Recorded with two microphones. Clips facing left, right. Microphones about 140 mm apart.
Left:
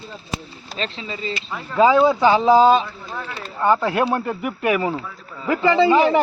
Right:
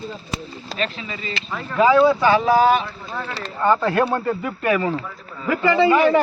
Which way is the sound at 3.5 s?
10° left (ahead or behind).